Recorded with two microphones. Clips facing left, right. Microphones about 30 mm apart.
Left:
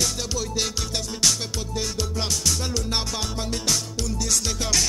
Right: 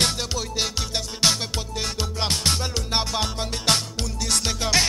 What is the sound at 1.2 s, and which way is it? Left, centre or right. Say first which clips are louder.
Music: right 2 dB; right.